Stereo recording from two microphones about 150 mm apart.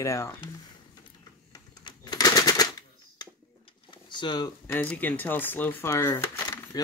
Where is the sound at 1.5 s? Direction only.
30° left (ahead or behind).